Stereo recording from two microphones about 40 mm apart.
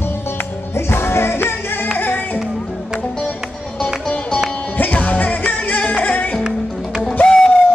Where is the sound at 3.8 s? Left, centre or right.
Left.